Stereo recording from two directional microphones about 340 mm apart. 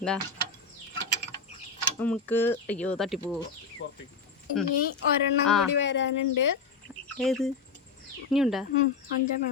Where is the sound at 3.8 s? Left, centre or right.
Left.